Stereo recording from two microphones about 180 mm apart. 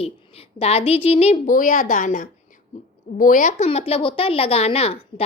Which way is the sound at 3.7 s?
30° left (ahead or behind).